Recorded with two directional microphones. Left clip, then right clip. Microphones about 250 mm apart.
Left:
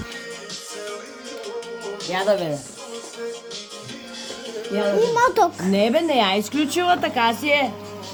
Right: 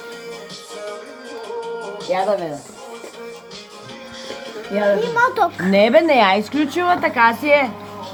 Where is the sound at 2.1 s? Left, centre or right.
Left.